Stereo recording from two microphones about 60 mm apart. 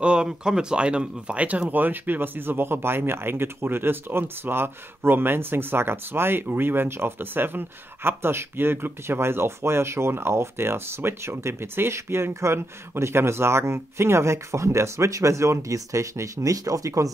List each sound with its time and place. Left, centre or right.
0.0 s speech: centre
1.7 s speech: right